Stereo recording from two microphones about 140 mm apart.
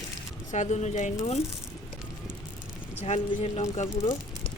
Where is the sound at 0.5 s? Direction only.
55° left (ahead or behind).